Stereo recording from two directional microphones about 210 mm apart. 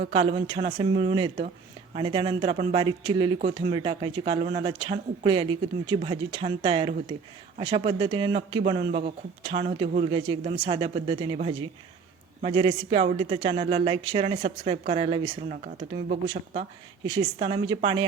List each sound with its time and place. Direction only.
0.1 s speech: 25° right (ahead or behind)
12.4 s speech: 25° right (ahead or behind)